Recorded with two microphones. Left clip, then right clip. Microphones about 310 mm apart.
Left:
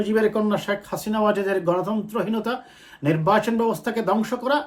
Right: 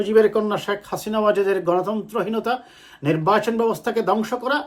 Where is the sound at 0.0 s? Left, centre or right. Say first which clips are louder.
Right 4 dB; centre.